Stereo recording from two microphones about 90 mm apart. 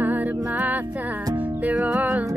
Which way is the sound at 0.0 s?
20° right (ahead or behind).